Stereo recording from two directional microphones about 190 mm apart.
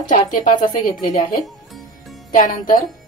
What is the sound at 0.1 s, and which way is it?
A woman's voice, 40° left (ahead or behind).